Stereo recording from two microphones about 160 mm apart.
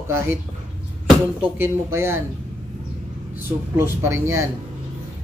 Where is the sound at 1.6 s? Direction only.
15° right (ahead or behind).